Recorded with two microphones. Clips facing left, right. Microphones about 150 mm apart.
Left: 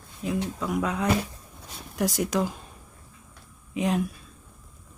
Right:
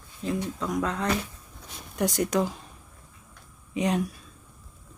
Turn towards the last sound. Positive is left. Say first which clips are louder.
# even
turn(degrees=0)  # may be behind; listen again after turning